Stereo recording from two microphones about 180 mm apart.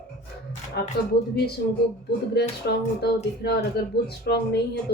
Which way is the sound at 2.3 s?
65° left (ahead or behind).